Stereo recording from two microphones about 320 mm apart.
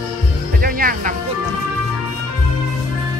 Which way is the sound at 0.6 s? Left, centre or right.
Right.